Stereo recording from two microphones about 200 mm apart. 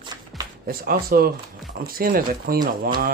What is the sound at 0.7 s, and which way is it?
Speech, 50° right (ahead or behind).